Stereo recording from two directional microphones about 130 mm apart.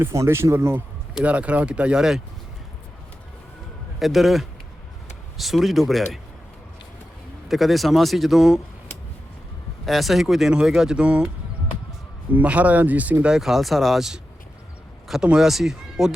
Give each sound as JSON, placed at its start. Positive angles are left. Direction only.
{"t": 0.0, "sound": "speech", "side_deg": -20}
{"t": 4.0, "sound": "speech", "side_deg": 0}
{"t": 7.4, "sound": "speech", "side_deg": 0}
{"t": 9.8, "sound": "speech", "side_deg": 0}
{"t": 12.3, "sound": "speech", "side_deg": -10}